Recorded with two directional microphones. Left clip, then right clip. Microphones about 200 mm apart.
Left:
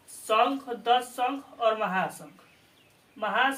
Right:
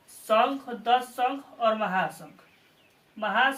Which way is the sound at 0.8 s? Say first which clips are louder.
Right 1 dB; 20° left (ahead or behind).